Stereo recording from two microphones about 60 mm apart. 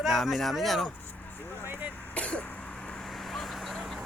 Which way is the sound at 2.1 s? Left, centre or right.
Left.